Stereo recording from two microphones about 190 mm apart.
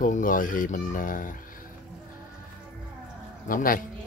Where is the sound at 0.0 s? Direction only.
45° left (ahead or behind).